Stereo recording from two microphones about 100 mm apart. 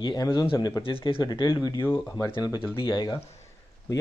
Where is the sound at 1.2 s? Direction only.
45° left (ahead or behind).